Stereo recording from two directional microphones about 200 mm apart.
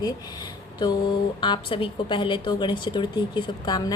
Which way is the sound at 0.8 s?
25° left (ahead or behind).